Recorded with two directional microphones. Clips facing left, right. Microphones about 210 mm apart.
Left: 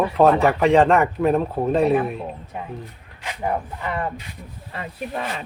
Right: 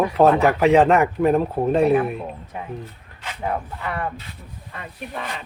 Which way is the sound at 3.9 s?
20° left (ahead or behind).